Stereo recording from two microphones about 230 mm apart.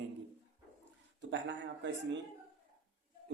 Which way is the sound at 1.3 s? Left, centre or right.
Right.